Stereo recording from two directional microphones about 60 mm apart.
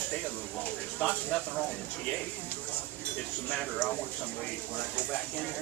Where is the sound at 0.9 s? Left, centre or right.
Left.